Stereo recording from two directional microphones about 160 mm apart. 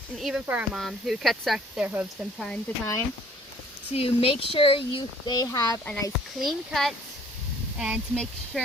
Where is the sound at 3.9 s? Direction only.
35° left (ahead or behind); by 5.8 s 20° left (ahead or behind).